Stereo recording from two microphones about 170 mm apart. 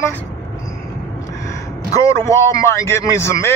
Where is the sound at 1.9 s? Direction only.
20° left (ahead or behind).